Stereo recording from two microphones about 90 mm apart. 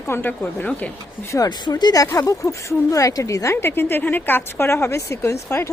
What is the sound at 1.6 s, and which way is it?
Speech, 50° left (ahead or behind).